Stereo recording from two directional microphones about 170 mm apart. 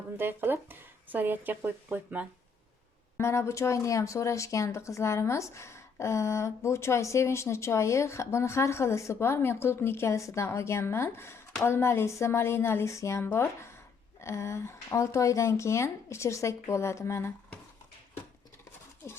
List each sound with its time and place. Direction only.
0.2 s speech: 10° right (ahead or behind)
3.2 s speech: 15° left (ahead or behind)